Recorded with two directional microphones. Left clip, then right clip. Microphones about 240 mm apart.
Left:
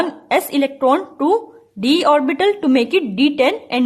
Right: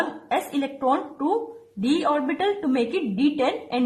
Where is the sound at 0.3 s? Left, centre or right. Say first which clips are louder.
Left 11 dB; left.